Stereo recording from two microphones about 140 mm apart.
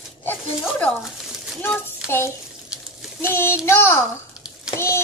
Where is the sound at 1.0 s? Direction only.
5° right (ahead or behind).